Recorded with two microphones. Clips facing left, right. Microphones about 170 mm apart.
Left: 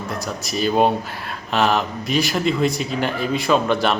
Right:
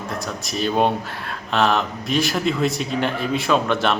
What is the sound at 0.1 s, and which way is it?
Speech, centre (ahead or behind).